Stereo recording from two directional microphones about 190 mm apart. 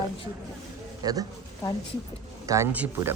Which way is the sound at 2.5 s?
10° right (ahead or behind).